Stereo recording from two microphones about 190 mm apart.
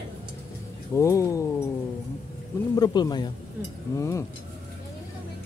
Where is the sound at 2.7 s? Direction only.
20° left (ahead or behind).